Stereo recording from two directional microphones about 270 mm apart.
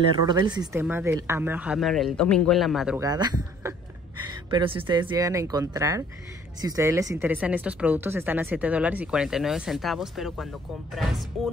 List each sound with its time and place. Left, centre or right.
0.3 s speech: centre
3.1 s speech: centre